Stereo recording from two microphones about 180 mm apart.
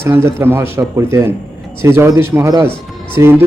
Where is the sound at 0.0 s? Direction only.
15° right (ahead or behind).